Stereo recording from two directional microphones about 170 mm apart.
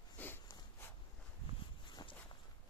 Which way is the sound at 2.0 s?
25° left (ahead or behind).